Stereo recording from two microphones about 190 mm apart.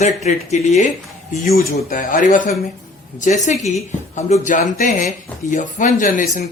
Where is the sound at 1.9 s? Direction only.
45° left (ahead or behind).